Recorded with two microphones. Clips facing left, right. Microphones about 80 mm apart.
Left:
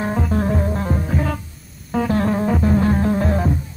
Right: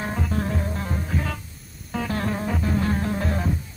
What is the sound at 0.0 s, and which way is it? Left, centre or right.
Music, left.